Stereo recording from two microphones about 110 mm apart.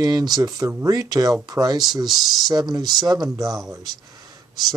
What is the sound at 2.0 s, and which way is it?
Speech, centre (ahead or behind).